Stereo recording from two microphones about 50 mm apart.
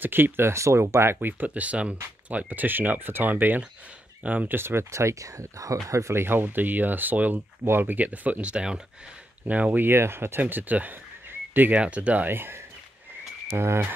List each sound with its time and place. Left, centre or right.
0.0 s speech: right
0.5 s speech: right
1.4 s speech: right
4.6 s speech: right
4.9 s speech: right
6.2 s speech: right; by 8.8 s centre
9.5 s speech: right
9.8 s speech: right
10.4 s speech: right
11.2 s a sound: right
11.7 s speech: right
12.3 s speech: right